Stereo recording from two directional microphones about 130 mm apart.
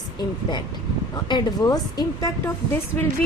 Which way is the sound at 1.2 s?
30° left (ahead or behind).